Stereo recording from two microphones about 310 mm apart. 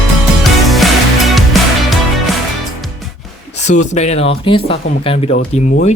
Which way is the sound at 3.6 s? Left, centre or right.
Left.